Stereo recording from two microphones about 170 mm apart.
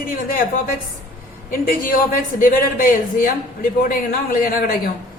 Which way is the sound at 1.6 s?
55° left (ahead or behind).